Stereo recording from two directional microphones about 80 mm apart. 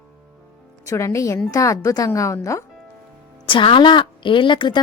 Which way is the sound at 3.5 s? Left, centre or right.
Left.